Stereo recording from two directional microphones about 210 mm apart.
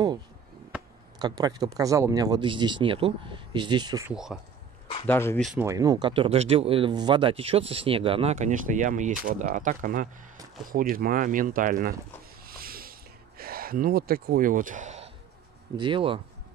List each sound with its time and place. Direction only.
1.2 s speech: 20° right (ahead or behind)
4.1 s speech: centre (ahead or behind)
5.0 s speech: 10° left (ahead or behind)
5.5 s speech: 10° right (ahead or behind); by 11.9 s 40° right (ahead or behind)
12.4 s a sound: 45° right (ahead or behind)
13.4 s speech: 45° right (ahead or behind)
15.8 s speech: 25° right (ahead or behind)